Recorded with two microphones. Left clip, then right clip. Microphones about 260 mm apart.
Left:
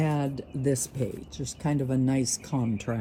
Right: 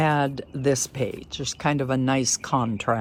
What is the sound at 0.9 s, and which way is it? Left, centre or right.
Speech, right.